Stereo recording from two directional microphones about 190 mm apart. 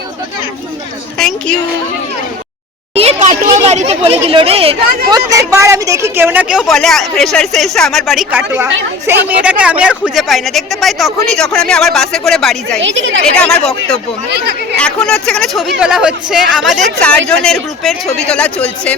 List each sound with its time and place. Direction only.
2.9 s speech: 35° right (ahead or behind); by 12.8 s centre (ahead or behind)
12.8 s a woman's voice: 80° right
13.3 s speech: 5° left (ahead or behind)
14.3 s speech: 55° right (ahead or behind)
15.0 s speech: 5° left (ahead or behind)